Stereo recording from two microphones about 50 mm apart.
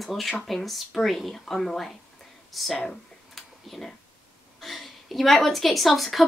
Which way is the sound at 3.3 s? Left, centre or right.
Centre.